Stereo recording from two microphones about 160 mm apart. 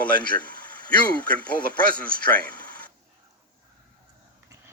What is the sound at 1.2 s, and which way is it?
Speech, 10° left (ahead or behind).